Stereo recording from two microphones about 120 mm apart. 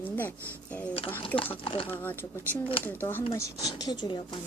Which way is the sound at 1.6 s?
50° left (ahead or behind).